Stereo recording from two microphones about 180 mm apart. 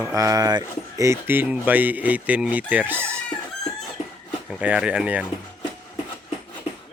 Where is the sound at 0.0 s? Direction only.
15° right (ahead or behind).